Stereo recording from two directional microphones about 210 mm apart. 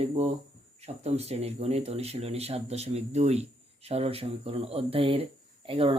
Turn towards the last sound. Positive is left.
turn(degrees=-25)  # may be behind; listen again after turning